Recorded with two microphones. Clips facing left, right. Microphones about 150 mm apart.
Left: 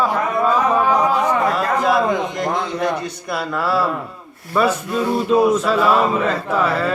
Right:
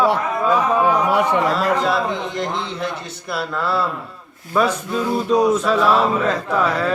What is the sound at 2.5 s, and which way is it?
Speech, 50° left (ahead or behind).